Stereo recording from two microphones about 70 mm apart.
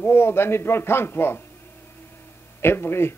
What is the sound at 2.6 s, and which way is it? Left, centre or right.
Speech, left.